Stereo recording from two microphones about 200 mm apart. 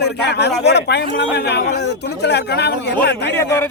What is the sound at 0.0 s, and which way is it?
A man's voice, 55° left (ahead or behind).